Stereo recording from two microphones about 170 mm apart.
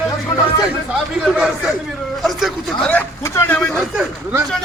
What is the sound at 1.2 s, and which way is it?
A man's voice, 5° right (ahead or behind).